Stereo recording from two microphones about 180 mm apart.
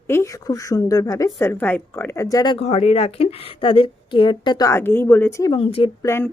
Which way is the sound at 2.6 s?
35° left (ahead or behind).